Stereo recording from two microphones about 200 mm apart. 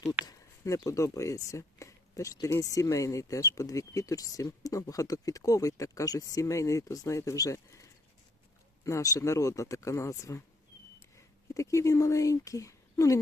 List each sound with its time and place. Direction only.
0.3 s speech: 15° left (ahead or behind)
11.5 s speech: 15° left (ahead or behind)